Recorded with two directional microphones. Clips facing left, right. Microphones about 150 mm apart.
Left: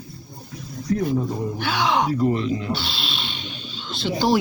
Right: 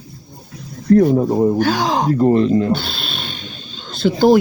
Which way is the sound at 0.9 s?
45° right (ahead or behind).